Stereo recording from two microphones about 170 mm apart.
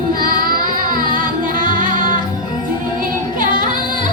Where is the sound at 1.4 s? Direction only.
50° right (ahead or behind).